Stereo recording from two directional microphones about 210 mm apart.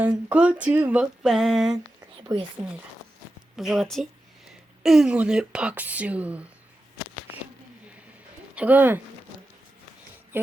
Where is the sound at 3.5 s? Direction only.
Centre (ahead or behind).